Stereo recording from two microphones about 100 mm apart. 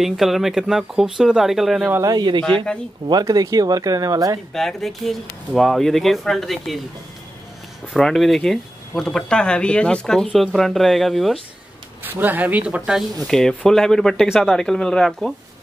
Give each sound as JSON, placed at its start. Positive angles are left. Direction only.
{"t": 0.0, "sound": "speech", "side_deg": 0}
{"t": 2.0, "sound": "speech", "side_deg": -45}
{"t": 2.4, "sound": "speech", "side_deg": 10}
{"t": 3.1, "sound": "speech", "side_deg": -40}
{"t": 4.6, "sound": "speech", "side_deg": 5}
{"t": 7.9, "sound": "speech", "side_deg": 0}
{"t": 12.0, "sound": "speech", "side_deg": -20}
{"t": 13.2, "sound": "speech", "side_deg": 5}